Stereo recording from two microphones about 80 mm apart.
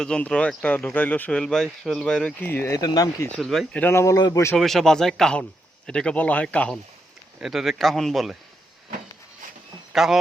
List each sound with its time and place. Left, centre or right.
0.0 s a man's voice: centre
1.4 s a man's voice: centre
2.4 s a man's voice: left
2.7 s speech: left
3.3 s a man's voice: centre
3.8 s speech: left
4.5 s a man's voice: centre
7.3 s a man's voice: centre
9.9 s speech: centre